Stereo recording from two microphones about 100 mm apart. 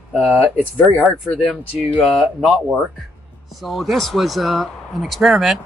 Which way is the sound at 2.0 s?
Centre (ahead or behind).